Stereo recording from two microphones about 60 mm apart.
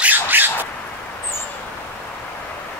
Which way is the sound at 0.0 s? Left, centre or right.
Right.